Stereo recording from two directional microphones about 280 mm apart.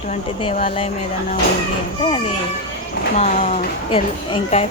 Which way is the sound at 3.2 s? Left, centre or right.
Left.